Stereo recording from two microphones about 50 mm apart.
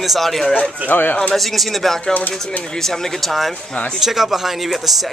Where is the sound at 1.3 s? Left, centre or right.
Centre.